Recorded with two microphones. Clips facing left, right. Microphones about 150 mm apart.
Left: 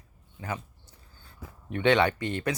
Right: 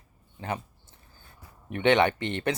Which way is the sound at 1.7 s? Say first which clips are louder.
Right 1 dB; 20° right (ahead or behind).